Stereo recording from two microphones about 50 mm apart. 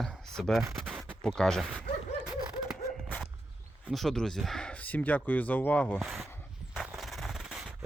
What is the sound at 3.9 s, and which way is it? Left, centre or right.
Speech, centre.